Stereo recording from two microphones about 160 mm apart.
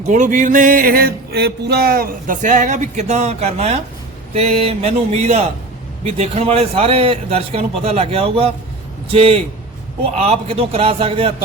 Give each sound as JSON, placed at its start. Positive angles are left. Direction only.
{"t": 0.1, "sound": "music", "side_deg": -55}
{"t": 4.4, "sound": "a man's voice", "side_deg": -40}